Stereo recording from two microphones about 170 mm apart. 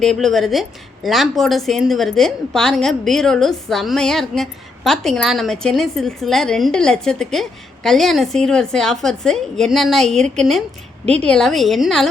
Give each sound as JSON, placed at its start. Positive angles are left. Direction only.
{"t": 0.0, "sound": "a woman's voice", "side_deg": 0}
{"t": 11.0, "sound": "speech", "side_deg": -35}
{"t": 11.3, "sound": "a woman's voice", "side_deg": 5}